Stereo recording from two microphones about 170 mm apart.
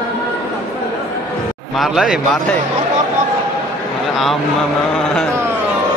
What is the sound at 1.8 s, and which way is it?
Speech, centre (ahead or behind).